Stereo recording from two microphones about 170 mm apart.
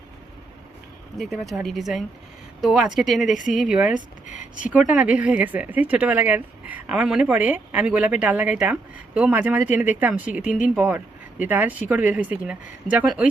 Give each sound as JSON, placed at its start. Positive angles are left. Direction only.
{"t": 1.2, "sound": "speech", "side_deg": 0}
{"t": 4.3, "sound": "speech", "side_deg": 45}
{"t": 4.9, "sound": "a woman's voice", "side_deg": -10}